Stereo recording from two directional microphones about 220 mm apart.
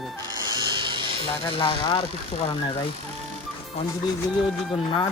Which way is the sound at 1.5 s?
25° left (ahead or behind).